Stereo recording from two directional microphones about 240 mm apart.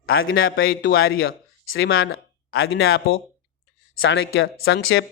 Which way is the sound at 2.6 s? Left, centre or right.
Left.